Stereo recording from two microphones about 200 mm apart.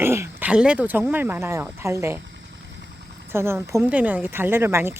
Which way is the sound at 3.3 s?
10° right (ahead or behind).